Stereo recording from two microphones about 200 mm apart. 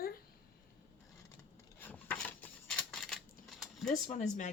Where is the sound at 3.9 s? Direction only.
40° left (ahead or behind).